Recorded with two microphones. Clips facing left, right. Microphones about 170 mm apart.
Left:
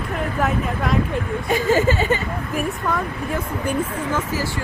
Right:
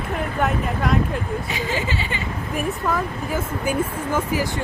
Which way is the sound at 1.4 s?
50° left (ahead or behind).